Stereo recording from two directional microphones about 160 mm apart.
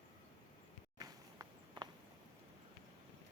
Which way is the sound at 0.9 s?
25° right (ahead or behind).